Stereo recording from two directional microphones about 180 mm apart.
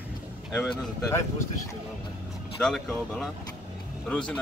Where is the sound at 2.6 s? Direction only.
5° left (ahead or behind).